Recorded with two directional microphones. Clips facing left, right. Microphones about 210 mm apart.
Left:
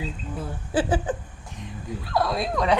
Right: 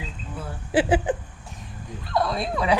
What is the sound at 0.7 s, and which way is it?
Speech, 15° right (ahead or behind).